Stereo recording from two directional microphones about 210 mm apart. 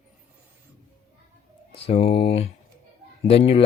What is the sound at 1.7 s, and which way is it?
Speech, 30° left (ahead or behind).